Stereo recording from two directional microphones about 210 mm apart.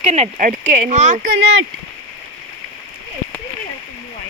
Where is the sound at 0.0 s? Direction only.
30° right (ahead or behind).